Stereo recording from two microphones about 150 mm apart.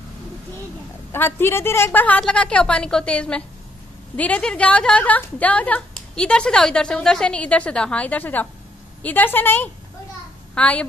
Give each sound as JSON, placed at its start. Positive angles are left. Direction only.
{"t": 1.1, "sound": "a woman's voice", "side_deg": 15}